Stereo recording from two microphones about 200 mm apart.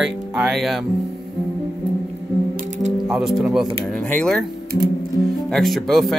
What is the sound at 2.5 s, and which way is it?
Ratchet, 40° right (ahead or behind).